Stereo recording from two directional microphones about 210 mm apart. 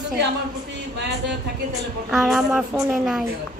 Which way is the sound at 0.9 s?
55° right (ahead or behind).